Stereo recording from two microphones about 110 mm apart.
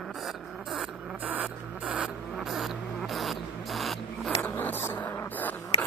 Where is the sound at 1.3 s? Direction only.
15° right (ahead or behind).